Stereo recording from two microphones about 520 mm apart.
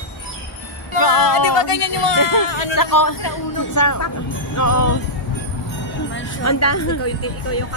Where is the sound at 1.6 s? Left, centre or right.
Left.